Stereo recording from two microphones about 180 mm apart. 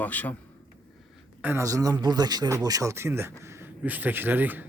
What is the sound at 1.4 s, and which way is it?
Speech, 15° right (ahead or behind).